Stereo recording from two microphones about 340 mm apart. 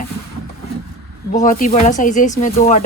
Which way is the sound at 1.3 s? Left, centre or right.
Left.